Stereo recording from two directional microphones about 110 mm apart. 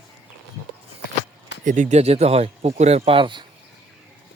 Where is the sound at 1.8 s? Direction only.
85° right.